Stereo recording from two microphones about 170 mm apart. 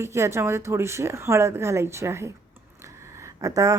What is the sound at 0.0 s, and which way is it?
Speech, 15° right (ahead or behind).